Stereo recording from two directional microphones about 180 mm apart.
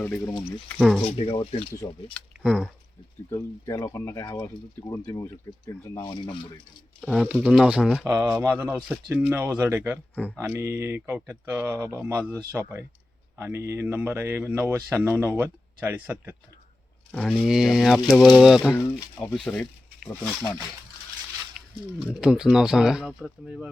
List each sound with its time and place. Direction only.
0.0 s speech: 10° left (ahead or behind)
1.0 s speech: 35° left (ahead or behind)
2.1 s speech: centre (ahead or behind)
3.2 s speech: 20° left (ahead or behind)
7.0 s speech: centre (ahead or behind)
8.0 s speech: 15° right (ahead or behind)
17.1 s speech: 5° left (ahead or behind)
18.8 s speech: 15° left (ahead or behind)
19.2 s speech: 5° left (ahead or behind)
21.9 s speech: 5° right (ahead or behind)